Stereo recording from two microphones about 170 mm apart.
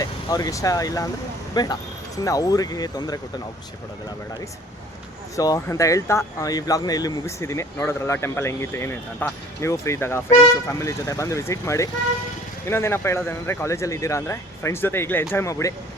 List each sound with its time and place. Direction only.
0.0 s speech: 20° left (ahead or behind)
5.4 s speech: 20° left (ahead or behind)